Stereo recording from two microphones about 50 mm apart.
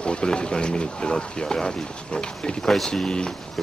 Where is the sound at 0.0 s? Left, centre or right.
Centre.